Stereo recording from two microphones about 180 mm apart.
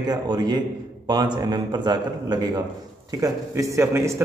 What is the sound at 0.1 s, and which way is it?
A man's voice, 20° right (ahead or behind).